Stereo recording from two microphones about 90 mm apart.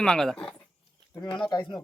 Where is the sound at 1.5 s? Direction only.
50° left (ahead or behind).